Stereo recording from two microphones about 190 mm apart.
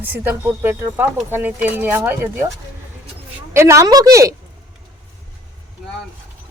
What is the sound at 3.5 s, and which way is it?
Speech, 15° right (ahead or behind).